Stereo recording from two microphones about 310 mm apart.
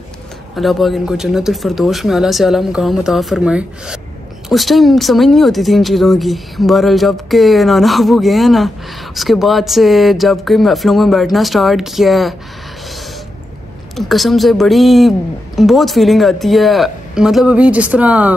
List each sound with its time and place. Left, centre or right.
0.6 s speech: centre
13.9 s speech: centre